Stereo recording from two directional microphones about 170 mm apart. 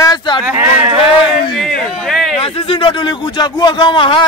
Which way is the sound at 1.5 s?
Centre (ahead or behind).